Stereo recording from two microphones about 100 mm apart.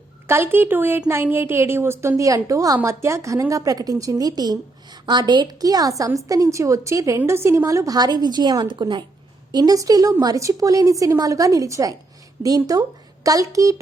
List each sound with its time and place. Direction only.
0.3 s a woman's voice: 25° right (ahead or behind)